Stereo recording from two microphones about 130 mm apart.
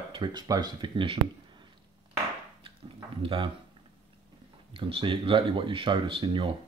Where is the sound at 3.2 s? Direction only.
45° right (ahead or behind).